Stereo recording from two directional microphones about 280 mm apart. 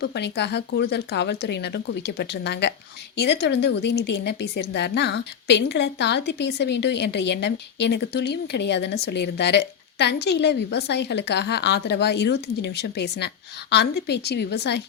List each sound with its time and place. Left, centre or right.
0.0 s a woman's voice: left